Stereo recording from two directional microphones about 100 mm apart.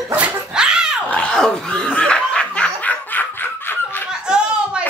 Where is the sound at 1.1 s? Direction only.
10° left (ahead or behind).